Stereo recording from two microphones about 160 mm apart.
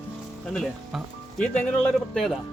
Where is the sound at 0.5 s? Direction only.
Centre (ahead or behind).